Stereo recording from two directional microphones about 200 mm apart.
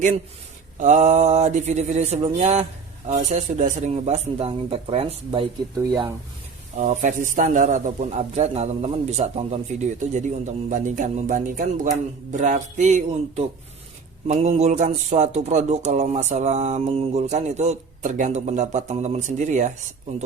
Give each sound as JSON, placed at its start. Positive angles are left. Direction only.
{"t": 0.8, "sound": "speech", "side_deg": -35}
{"t": 6.7, "sound": "speech", "side_deg": -40}